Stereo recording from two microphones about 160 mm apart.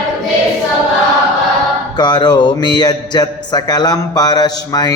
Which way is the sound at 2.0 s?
25° left (ahead or behind).